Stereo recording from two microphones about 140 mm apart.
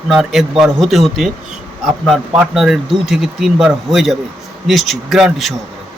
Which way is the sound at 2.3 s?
5° right (ahead or behind).